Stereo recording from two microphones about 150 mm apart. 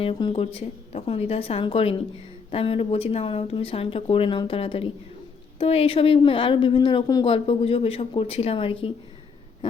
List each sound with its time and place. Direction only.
0.0 s a woman's voice: 40° left (ahead or behind)